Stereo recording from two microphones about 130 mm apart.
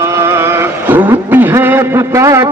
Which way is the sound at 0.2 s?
20° right (ahead or behind).